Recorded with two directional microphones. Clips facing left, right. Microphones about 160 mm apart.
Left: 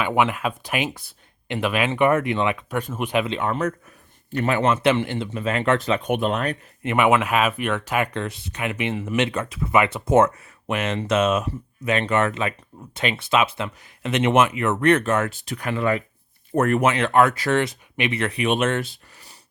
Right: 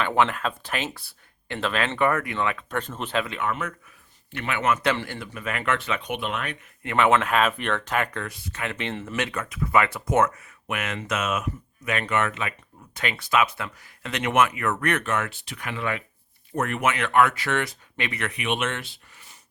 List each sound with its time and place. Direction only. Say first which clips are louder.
0.0 s speech: left 2 dB; 10° left (ahead or behind)
3.2 s a man's voice: left 5 dB; 30° left (ahead or behind)
6.8 s speech: left 2 dB; 15° left (ahead or behind)
8.1 s speech: left 5 dB; 25° left (ahead or behind)
9.1 s speech: left 7 dB; 25° left (ahead or behind); by 16.9 s 45° left (ahead or behind)
16.9 s a man's voice: left 3 dB; 30° left (ahead or behind)
17.6 s speech: left 6 dB; 20° left (ahead or behind); by 19.4 s 40° left (ahead or behind)